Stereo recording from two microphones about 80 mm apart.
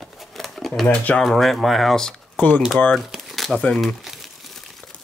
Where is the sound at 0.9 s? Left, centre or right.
Centre.